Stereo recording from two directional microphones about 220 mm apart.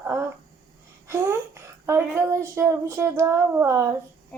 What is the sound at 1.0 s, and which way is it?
Speech, 10° right (ahead or behind).